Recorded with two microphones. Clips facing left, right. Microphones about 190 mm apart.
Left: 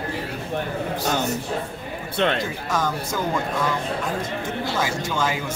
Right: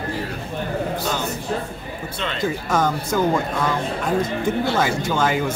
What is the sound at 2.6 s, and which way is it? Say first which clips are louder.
Speech: right 4 dB; 50° right (ahead or behind).